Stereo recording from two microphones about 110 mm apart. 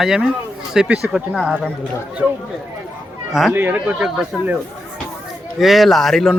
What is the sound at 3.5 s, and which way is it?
Speech, 20° right (ahead or behind).